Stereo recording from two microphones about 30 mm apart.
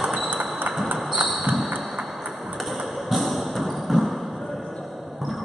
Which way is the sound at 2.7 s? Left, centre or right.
Centre.